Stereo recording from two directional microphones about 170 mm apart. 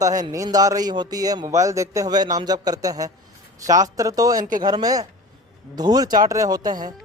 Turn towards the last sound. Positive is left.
turn(degrees=-25)  # may be behind; listen again after turning